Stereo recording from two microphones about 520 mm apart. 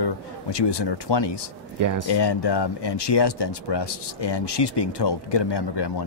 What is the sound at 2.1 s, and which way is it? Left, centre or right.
Speech, left.